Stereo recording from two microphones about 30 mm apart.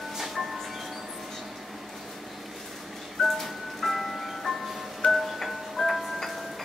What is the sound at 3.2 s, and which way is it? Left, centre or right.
Music, centre.